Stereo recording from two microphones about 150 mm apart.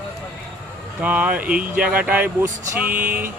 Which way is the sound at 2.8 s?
70° right (ahead or behind).